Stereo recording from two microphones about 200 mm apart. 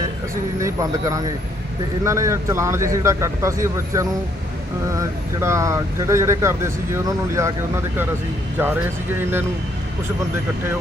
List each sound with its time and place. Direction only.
0.6 s speech: 15° right (ahead or behind)
8.5 s speech: 10° right (ahead or behind)